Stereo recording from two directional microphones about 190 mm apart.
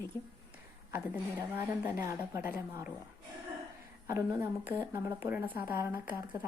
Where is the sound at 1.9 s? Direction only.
10° right (ahead or behind).